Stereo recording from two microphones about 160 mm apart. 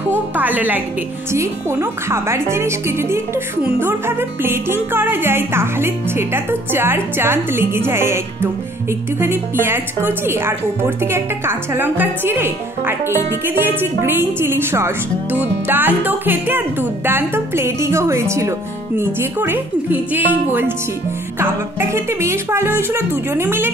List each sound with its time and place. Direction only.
0.1 s a woman's voice: 10° right (ahead or behind)